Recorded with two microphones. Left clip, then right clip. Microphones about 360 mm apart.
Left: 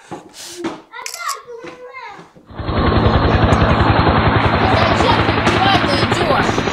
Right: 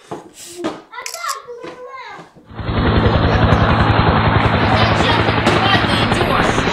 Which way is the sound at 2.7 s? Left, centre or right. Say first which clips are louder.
Left 1 dB; centre.